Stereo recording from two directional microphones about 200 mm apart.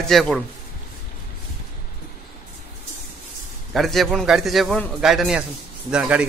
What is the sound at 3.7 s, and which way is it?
A man's voice, centre (ahead or behind).